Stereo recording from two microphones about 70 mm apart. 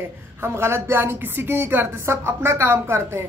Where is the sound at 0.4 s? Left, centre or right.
Right.